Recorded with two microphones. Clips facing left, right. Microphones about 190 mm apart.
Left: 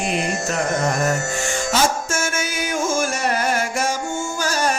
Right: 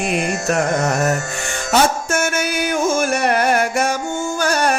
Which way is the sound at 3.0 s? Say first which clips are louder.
Right 4 dB; 60° right (ahead or behind).